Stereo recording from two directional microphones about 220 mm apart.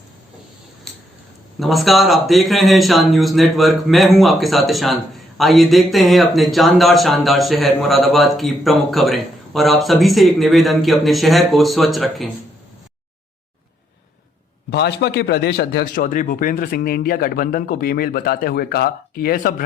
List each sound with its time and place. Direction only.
1.5 s speech: centre (ahead or behind)
14.7 s a man's voice: 50° left (ahead or behind)